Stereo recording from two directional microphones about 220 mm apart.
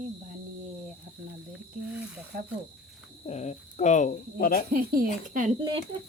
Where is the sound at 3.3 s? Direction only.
30° left (ahead or behind).